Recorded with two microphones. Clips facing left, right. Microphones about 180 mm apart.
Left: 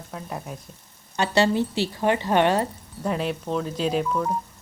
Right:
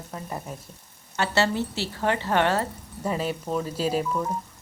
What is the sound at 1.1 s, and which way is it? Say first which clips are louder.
Speech: left 3 dB; 15° left (ahead or behind).